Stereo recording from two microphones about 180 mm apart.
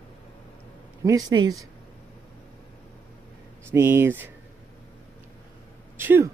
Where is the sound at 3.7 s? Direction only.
15° right (ahead or behind).